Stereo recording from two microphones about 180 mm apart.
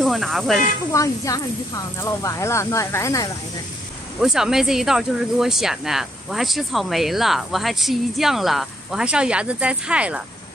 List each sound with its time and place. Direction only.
0.0 s speech: centre (ahead or behind)
0.9 s speech: 20° left (ahead or behind)
4.2 s speech: 5° right (ahead or behind)